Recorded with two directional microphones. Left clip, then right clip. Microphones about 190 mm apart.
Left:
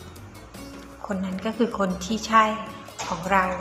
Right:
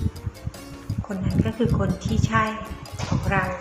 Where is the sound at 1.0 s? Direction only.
15° right (ahead or behind).